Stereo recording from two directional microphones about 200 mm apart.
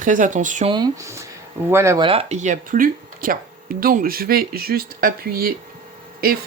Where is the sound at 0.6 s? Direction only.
20° right (ahead or behind).